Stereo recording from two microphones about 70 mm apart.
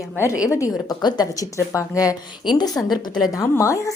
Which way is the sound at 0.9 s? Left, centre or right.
Left.